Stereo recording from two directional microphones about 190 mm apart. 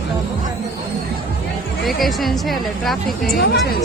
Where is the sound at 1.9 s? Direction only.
Centre (ahead or behind).